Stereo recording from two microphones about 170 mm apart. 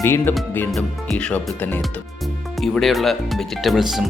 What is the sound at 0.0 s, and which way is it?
Speech, 15° left (ahead or behind).